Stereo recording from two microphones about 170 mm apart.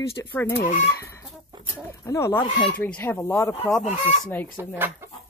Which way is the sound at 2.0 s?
15° left (ahead or behind).